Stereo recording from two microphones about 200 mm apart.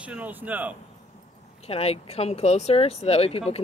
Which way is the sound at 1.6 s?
30° left (ahead or behind).